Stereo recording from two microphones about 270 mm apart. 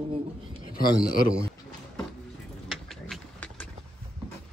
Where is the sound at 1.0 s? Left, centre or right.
Left.